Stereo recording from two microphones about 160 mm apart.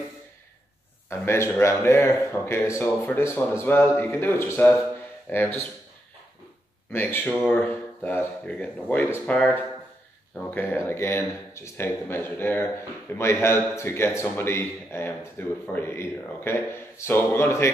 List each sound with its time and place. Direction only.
1.2 s speech: 15° left (ahead or behind)
6.9 s speech: 15° left (ahead or behind)